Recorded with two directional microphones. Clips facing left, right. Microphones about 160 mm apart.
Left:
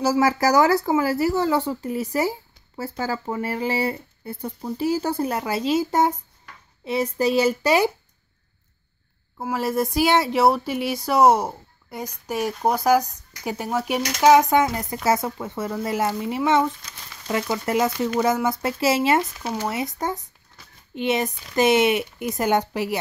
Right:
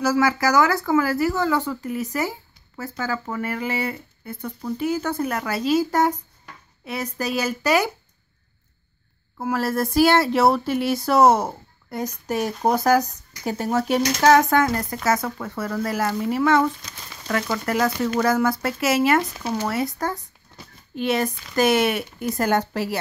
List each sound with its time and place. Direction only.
0.0 s speech: 30° left (ahead or behind)
9.5 s speech: 15° left (ahead or behind)